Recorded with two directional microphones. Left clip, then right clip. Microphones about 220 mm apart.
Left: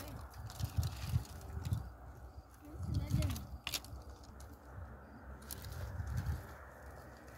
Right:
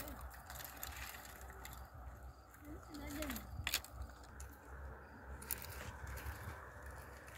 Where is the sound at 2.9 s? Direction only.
10° right (ahead or behind).